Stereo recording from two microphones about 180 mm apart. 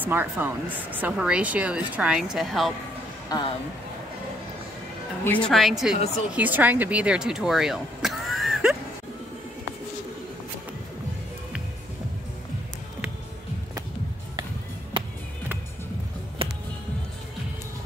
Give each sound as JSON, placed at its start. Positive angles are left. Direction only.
{"t": 0.0, "sound": "a woman's voice", "side_deg": -10}
{"t": 3.3, "sound": "speech", "side_deg": 20}
{"t": 5.2, "sound": "a woman's voice", "side_deg": 5}
{"t": 16.4, "sound": "music", "side_deg": -30}